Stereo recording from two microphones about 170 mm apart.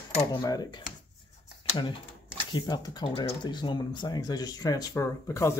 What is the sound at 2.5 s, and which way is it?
Speech, 25° left (ahead or behind).